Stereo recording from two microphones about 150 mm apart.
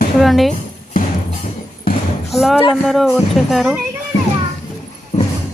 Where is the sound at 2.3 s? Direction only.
Centre (ahead or behind).